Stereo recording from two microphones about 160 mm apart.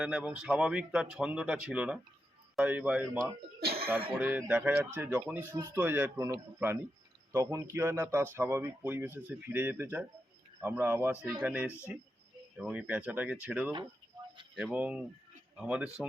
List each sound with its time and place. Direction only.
0.0 s speech: 5° right (ahead or behind)
3.6 s cough: 75° right (ahead or behind)
4.2 s speech: 10° right (ahead or behind)